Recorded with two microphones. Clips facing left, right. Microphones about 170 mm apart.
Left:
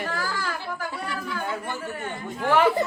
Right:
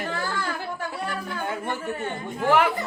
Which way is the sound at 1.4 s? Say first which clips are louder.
Right 1 dB; 25° right (ahead or behind).